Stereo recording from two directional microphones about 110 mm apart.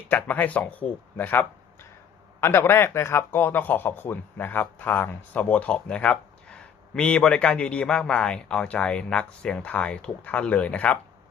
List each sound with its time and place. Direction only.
0.1 s speech: 15° left (ahead or behind)